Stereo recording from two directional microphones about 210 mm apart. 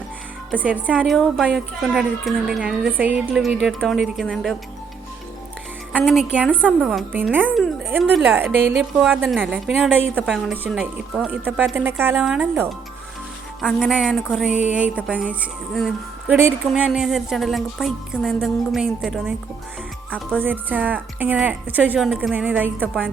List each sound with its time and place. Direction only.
0.5 s a woman's voice: 5° right (ahead or behind)
6.0 s a woman's voice: centre (ahead or behind)
20.4 s a woman's voice: 10° right (ahead or behind)